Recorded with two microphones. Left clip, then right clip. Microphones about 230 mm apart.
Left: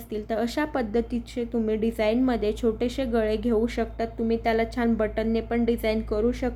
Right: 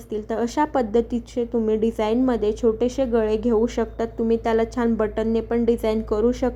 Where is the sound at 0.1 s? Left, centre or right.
Centre.